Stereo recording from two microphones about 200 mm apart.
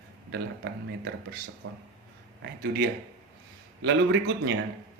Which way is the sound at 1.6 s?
90° right.